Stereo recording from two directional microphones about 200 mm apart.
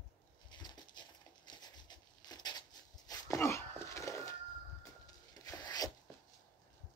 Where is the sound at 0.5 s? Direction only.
20° left (ahead or behind).